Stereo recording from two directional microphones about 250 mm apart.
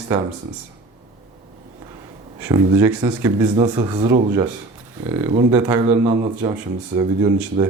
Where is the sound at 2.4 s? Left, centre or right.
Centre.